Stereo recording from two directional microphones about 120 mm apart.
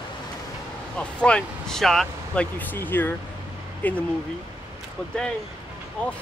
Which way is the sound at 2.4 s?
15° left (ahead or behind).